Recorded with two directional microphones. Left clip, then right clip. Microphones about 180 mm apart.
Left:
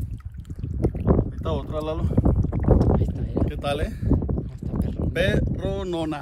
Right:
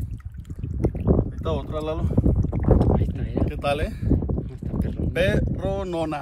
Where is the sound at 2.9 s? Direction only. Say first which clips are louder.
Even; 15° left (ahead or behind).